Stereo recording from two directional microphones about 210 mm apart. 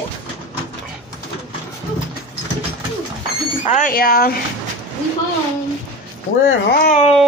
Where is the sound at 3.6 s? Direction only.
40° left (ahead or behind).